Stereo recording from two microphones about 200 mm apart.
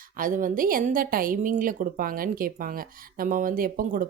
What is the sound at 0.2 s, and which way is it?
A woman's voice, 40° right (ahead or behind).